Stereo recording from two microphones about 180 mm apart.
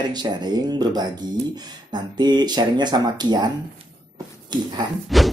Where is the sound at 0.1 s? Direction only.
25° right (ahead or behind).